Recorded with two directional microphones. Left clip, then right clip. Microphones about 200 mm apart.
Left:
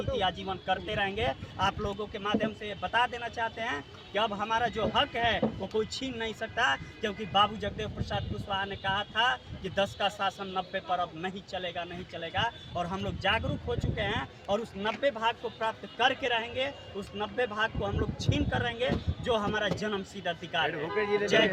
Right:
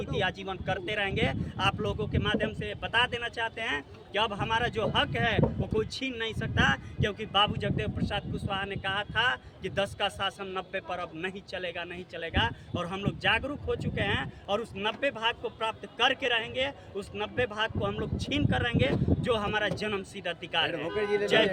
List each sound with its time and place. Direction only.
0.2 s speech: 15° right (ahead or behind)
20.9 s a man's voice: 55° right (ahead or behind)